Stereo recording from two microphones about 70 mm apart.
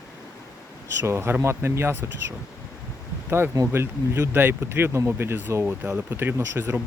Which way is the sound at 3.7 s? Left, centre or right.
Right.